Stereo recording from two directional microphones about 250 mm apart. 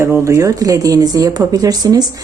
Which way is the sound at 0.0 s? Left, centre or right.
Centre.